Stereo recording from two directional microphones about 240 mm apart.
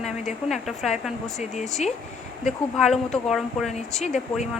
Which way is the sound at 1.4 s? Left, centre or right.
Left.